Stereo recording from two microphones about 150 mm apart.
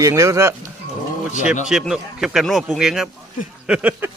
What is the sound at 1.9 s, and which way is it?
A man's voice, 5° right (ahead or behind).